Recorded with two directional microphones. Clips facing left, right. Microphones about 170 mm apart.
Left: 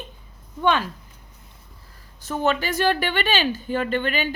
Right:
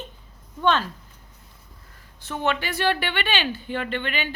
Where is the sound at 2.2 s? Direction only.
40° left (ahead or behind).